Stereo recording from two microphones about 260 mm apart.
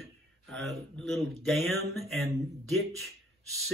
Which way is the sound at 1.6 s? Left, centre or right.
Right.